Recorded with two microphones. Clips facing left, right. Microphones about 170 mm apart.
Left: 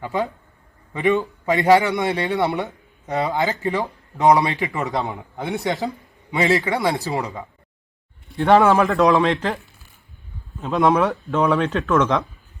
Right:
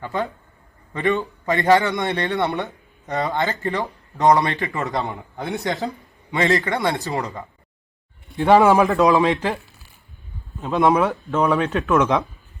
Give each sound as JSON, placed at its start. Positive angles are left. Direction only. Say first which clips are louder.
{"t": 0.0, "sound": "a man's voice", "louder": "left 2 dB", "side_deg": 10}
{"t": 8.7, "sound": "a man's voice", "louder": "right 1 dB", "side_deg": -20}
{"t": 9.0, "sound": "speech", "louder": "even", "side_deg": 0}
{"t": 10.6, "sound": "speech", "louder": "even", "side_deg": 0}